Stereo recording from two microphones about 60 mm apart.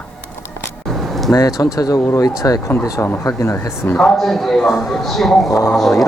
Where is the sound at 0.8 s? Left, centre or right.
Centre.